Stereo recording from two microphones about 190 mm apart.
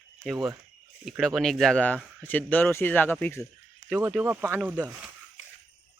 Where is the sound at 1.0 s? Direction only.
Centre (ahead or behind).